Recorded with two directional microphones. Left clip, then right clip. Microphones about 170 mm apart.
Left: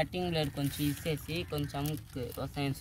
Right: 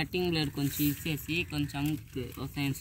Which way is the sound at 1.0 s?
25° left (ahead or behind).